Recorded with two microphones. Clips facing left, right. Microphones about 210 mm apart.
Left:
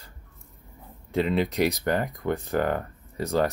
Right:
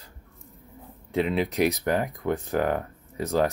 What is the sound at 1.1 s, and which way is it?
Speech, centre (ahead or behind).